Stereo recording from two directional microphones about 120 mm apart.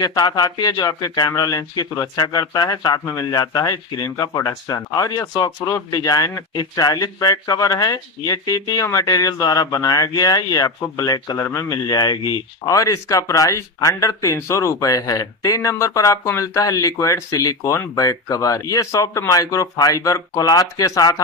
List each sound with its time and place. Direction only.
0.0 s speech: 35° left (ahead or behind)